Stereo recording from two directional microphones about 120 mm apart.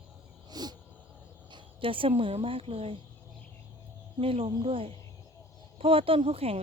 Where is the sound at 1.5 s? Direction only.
45° right (ahead or behind).